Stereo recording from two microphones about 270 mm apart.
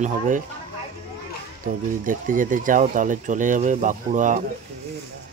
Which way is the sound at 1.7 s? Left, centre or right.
Right.